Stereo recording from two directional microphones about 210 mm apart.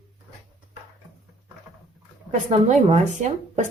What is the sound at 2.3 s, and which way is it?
Speech, 35° right (ahead or behind).